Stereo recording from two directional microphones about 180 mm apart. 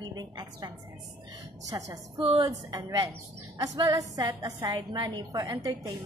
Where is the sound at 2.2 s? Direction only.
35° right (ahead or behind).